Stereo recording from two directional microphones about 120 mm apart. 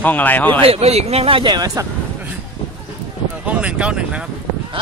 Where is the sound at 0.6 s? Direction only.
55° right (ahead or behind); by 1.9 s 30° right (ahead or behind).